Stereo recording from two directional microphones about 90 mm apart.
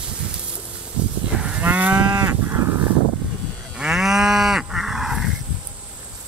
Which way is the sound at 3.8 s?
5° right (ahead or behind).